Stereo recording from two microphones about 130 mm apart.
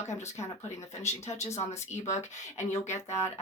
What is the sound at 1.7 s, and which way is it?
Speech, 60° left (ahead or behind).